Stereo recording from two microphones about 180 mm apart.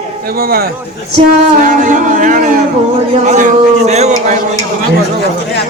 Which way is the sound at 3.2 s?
45° right (ahead or behind).